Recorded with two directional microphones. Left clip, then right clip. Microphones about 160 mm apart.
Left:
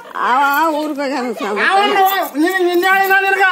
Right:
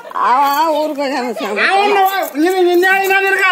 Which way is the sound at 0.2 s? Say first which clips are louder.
Right 1 dB; 35° left (ahead or behind).